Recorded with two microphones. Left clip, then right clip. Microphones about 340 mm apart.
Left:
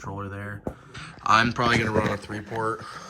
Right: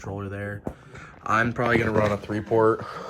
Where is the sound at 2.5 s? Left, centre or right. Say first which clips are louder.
Right 8 dB; right.